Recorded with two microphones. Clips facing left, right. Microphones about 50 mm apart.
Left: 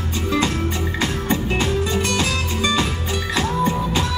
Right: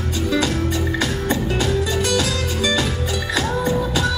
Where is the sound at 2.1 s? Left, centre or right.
Left.